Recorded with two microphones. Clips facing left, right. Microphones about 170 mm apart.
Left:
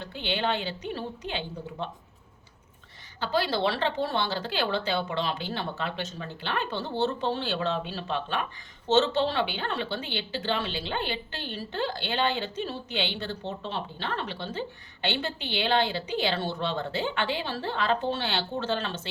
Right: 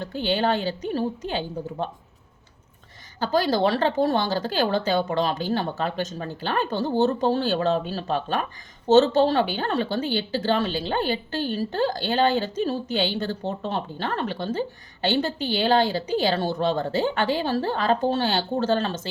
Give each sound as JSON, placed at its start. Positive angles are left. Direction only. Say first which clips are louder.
{"t": 0.0, "sound": "a woman's voice", "louder": "right 6 dB", "side_deg": -40}
{"t": 3.2, "sound": "a woman's voice", "louder": "right 5 dB", "side_deg": -40}